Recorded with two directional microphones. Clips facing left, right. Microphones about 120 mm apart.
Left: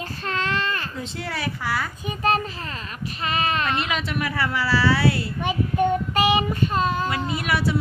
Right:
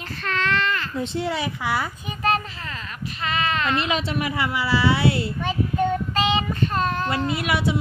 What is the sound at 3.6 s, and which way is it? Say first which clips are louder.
Speech: right 2 dB; 25° right (ahead or behind).